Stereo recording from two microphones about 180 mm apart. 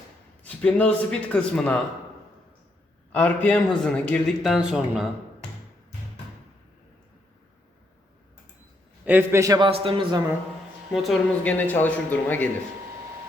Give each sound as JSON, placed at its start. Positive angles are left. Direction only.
{"t": 0.4, "sound": "a man's voice", "side_deg": 5}
{"t": 3.1, "sound": "a man's voice", "side_deg": 10}
{"t": 9.0, "sound": "a man's voice", "side_deg": -10}
{"t": 9.6, "sound": "a man's voice", "side_deg": -30}
{"t": 10.9, "sound": "a man's voice", "side_deg": 0}